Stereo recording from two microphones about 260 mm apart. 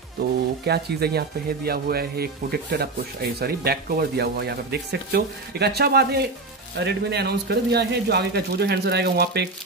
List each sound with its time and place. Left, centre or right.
0.7 s speech: right